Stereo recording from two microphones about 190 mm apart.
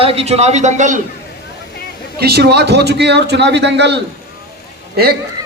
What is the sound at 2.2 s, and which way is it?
A man's voice, 55° right (ahead or behind).